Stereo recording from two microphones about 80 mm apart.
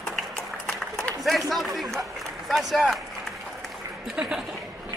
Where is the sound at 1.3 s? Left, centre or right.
Centre.